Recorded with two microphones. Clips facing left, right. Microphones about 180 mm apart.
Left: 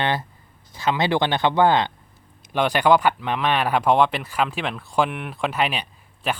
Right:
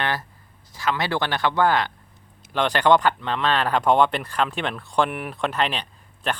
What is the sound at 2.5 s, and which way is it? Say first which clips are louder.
Speech: left 1 dB; 10° left (ahead or behind).